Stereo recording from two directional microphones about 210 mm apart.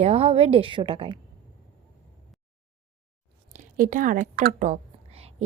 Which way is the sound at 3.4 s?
35° right (ahead or behind).